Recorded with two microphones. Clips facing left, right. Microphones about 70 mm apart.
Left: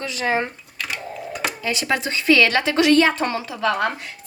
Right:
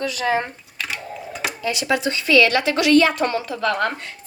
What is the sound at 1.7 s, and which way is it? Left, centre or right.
A woman's voice, left.